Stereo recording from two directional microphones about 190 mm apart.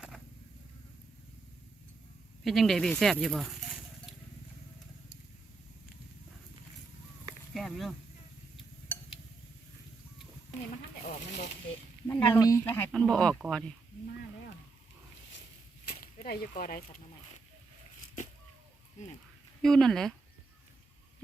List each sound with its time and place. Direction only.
2.4 s speech: centre (ahead or behind)
7.5 s a sound: centre (ahead or behind)
11.3 s snake: 40° left (ahead or behind)
12.0 s speech: 10° left (ahead or behind)
15.9 s speech: 50° left (ahead or behind)
19.6 s speech: centre (ahead or behind)